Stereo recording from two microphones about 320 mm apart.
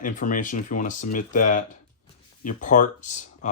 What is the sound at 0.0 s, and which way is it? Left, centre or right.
Speech, left.